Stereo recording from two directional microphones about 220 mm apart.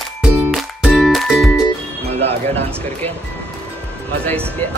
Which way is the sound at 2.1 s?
30° right (ahead or behind).